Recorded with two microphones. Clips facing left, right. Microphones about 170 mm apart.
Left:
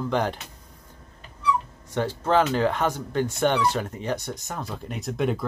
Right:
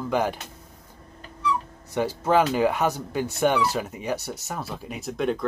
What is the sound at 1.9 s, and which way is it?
Speech, 10° right (ahead or behind).